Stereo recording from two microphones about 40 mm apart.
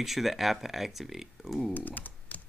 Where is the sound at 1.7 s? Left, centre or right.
Left.